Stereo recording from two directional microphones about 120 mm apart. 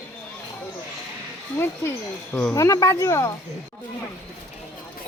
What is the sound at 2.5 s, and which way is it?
Speech, 25° left (ahead or behind).